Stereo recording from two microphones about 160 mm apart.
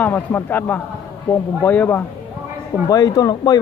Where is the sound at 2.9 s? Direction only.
20° left (ahead or behind).